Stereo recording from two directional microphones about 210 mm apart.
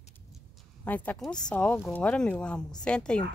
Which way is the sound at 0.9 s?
5° left (ahead or behind).